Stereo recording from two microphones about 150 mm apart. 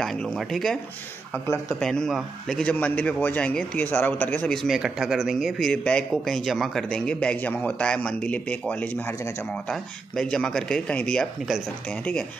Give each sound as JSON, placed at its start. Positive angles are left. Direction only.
{"t": 0.0, "sound": "speech", "side_deg": 0}
{"t": 1.3, "sound": "a man's voice", "side_deg": 15}
{"t": 1.8, "sound": "a man's voice", "side_deg": 5}